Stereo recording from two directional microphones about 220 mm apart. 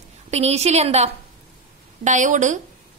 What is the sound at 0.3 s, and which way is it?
A woman's voice, 30° right (ahead or behind).